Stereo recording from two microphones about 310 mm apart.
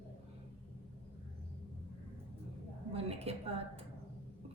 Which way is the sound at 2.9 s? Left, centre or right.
Centre.